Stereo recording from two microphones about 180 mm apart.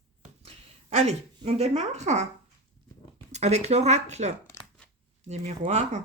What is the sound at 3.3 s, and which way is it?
Speech, 40° right (ahead or behind).